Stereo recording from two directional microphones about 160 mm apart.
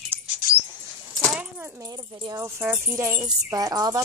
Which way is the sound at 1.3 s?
10° right (ahead or behind).